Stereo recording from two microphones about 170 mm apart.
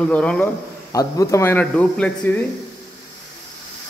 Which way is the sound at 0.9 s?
20° left (ahead or behind).